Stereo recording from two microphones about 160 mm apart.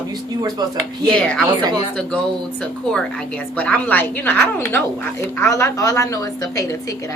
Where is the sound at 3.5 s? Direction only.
10° left (ahead or behind).